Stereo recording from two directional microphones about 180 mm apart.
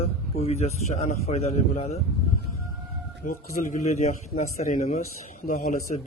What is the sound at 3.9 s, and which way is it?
A man's voice, 40° left (ahead or behind).